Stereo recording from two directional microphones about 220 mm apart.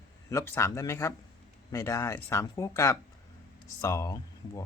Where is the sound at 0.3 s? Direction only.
10° left (ahead or behind).